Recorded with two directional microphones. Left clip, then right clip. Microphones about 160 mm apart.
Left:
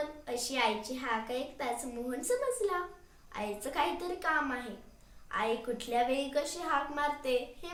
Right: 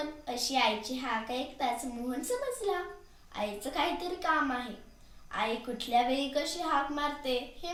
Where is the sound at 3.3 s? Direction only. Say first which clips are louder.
Right 2 dB; 20° left (ahead or behind).